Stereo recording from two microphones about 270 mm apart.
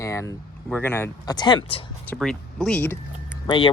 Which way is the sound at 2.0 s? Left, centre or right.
Centre.